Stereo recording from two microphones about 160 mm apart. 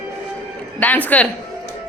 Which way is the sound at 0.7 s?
10° left (ahead or behind).